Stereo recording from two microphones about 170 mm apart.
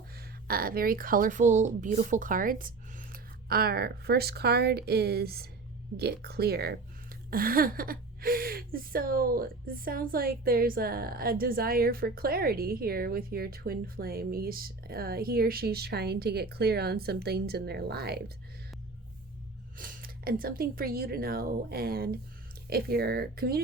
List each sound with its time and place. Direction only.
0.2 s a woman's voice: 60° right (ahead or behind)
19.7 s a woman's voice: 55° right (ahead or behind)